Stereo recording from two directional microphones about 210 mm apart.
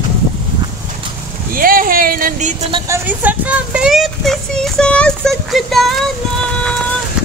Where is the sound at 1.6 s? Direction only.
45° right (ahead or behind).